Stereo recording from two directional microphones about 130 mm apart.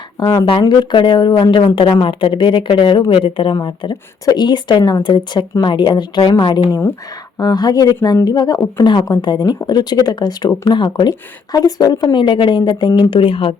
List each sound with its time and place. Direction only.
0.2 s speech: 30° left (ahead or behind)